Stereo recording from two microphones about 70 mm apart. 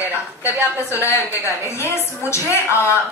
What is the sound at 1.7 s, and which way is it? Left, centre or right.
A woman's voice, left.